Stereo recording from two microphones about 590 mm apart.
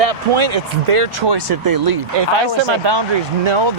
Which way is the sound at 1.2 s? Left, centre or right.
Right.